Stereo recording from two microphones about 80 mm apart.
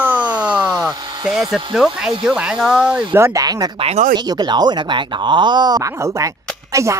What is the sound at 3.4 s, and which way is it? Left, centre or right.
Speech, right.